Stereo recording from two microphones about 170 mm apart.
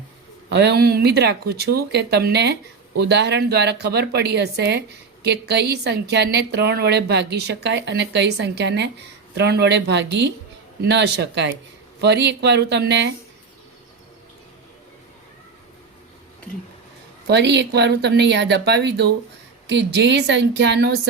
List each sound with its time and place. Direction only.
0.5 s speech: 80° right
17.2 s speech: 85° right